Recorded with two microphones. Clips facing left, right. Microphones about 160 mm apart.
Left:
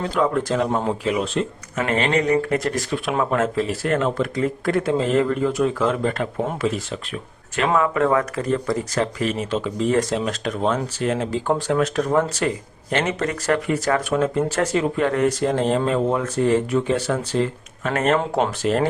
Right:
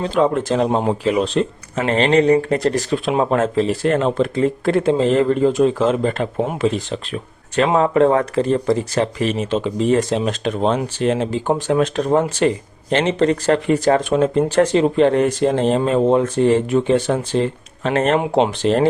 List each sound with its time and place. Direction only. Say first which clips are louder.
0.0 s speech: right 4 dB; 20° right (ahead or behind)
18.2 s speech: right 5 dB; 15° right (ahead or behind)
18.6 s speech: right 2 dB; 30° right (ahead or behind)